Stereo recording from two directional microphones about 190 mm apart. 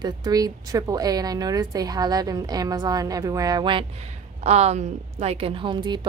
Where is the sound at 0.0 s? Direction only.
20° right (ahead or behind).